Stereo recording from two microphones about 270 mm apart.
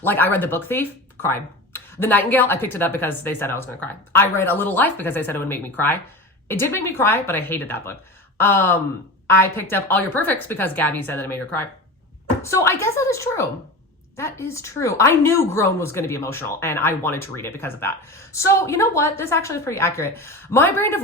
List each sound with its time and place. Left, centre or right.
0.0 s speech: centre